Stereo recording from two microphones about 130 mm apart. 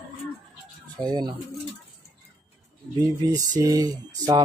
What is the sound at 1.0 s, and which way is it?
Speech, 35° right (ahead or behind).